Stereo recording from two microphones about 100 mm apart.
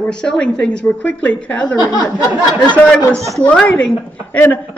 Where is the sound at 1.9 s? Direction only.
40° left (ahead or behind).